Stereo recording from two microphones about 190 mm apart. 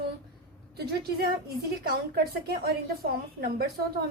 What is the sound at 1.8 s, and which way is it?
A woman's voice, 55° right (ahead or behind).